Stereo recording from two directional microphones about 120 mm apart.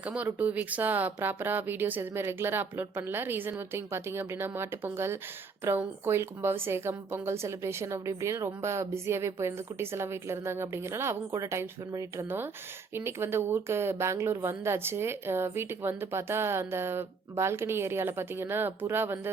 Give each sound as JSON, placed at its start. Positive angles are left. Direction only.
{"t": 0.0, "sound": "a woman's voice", "side_deg": -10}